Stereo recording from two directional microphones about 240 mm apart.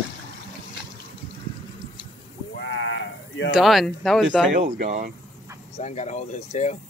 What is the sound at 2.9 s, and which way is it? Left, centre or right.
Sheep, left.